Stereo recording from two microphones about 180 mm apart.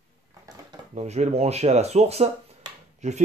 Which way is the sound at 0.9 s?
35° right (ahead or behind).